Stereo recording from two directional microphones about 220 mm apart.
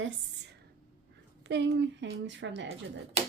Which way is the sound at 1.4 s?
50° right (ahead or behind).